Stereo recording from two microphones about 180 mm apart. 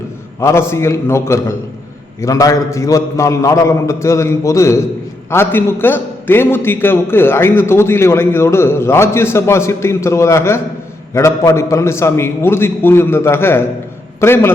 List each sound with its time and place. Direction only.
0.3 s a man's voice: 15° left (ahead or behind)